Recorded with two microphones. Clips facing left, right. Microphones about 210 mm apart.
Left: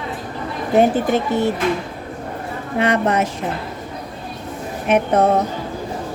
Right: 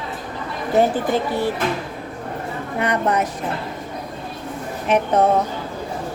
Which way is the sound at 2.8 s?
90° left.